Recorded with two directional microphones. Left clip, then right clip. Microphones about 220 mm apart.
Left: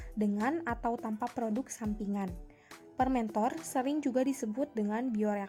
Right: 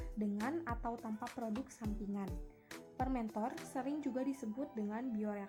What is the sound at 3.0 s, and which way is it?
A woman's voice, 40° left (ahead or behind).